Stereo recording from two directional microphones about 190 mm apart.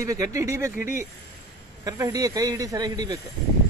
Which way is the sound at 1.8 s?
20° right (ahead or behind).